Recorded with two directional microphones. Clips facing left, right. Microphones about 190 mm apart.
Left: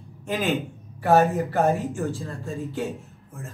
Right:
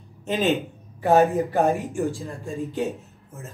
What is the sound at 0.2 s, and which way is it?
Speech, 25° right (ahead or behind).